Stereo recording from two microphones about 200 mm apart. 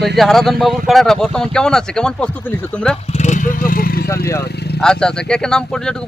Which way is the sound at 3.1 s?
35° left (ahead or behind).